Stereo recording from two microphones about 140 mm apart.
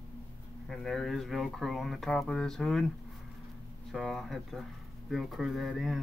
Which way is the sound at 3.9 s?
Centre (ahead or behind).